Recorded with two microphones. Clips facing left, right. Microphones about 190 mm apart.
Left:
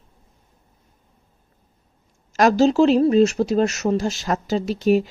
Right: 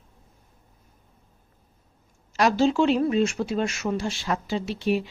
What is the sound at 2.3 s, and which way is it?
Speech, 45° left (ahead or behind).